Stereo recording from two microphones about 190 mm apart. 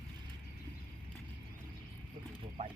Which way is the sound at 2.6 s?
30° right (ahead or behind).